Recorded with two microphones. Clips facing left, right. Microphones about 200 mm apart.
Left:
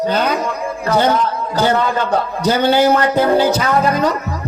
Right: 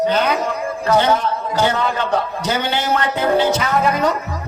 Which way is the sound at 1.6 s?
35° left (ahead or behind).